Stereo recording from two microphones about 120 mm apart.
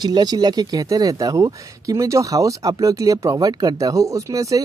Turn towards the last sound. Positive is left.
turn(degrees=-30)  # may be behind; listen again after turning